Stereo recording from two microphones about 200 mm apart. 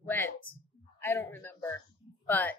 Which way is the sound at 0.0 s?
10° left (ahead or behind).